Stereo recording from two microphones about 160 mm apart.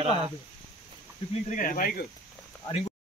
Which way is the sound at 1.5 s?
55° left (ahead or behind).